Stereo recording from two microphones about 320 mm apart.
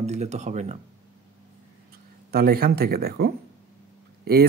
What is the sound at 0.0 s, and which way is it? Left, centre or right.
Speech, right.